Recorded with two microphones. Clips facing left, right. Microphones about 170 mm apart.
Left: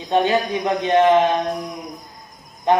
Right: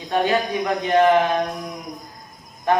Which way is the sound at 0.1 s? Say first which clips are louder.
Left 2 dB; 20° left (ahead or behind).